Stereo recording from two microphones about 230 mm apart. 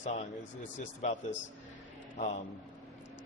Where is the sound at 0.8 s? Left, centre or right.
Left.